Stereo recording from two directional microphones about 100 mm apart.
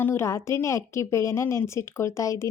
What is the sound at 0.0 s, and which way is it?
Speech, 25° left (ahead or behind).